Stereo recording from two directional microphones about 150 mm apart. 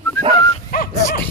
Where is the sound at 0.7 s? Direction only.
70° left (ahead or behind).